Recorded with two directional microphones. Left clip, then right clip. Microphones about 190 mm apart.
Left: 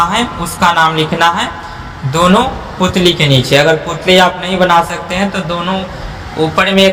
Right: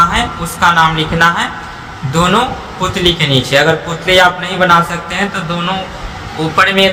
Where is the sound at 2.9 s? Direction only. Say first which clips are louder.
Left 1 dB; 20° left (ahead or behind).